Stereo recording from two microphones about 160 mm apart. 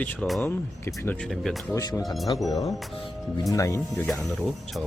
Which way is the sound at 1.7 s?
20° left (ahead or behind).